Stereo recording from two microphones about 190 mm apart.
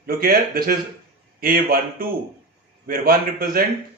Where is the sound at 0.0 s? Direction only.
50° right (ahead or behind).